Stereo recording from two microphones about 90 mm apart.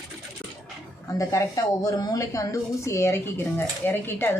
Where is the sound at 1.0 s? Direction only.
35° left (ahead or behind).